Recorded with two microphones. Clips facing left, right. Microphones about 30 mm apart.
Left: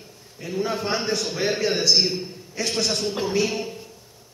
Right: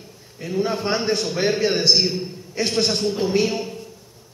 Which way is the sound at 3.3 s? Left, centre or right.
Right.